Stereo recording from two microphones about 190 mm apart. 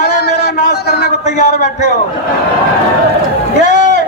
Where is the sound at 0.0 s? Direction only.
60° left (ahead or behind).